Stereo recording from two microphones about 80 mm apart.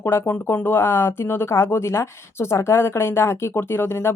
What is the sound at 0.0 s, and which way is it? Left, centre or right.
A woman's voice, left.